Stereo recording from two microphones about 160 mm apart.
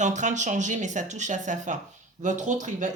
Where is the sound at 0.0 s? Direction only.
50° right (ahead or behind).